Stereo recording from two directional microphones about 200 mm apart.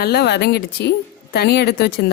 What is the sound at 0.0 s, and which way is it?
A woman's voice, 55° left (ahead or behind).